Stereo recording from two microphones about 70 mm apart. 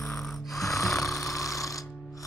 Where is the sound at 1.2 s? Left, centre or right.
Left.